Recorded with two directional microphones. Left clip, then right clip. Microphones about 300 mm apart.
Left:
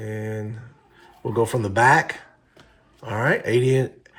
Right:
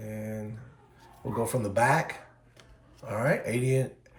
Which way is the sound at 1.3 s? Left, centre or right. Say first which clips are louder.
Left 7 dB; left.